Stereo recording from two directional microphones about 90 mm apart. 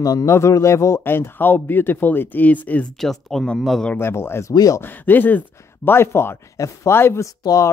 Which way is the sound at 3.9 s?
25° left (ahead or behind).